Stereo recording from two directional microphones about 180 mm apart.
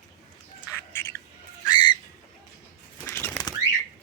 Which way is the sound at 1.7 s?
25° left (ahead or behind).